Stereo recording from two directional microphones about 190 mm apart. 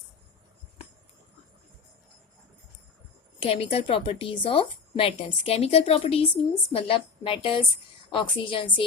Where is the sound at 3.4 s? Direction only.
30° left (ahead or behind).